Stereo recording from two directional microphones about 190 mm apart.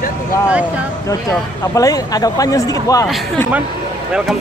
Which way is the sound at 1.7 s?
20° left (ahead or behind).